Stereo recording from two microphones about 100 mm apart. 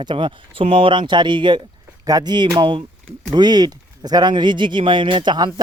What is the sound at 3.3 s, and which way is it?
Speech, 45° right (ahead or behind).